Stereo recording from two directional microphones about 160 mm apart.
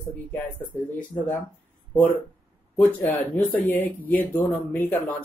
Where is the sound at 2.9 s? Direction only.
10° left (ahead or behind).